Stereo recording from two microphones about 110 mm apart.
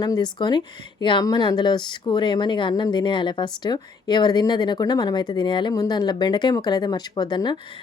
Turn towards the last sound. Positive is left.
turn(degrees=40)  # may be behind; listen again after turning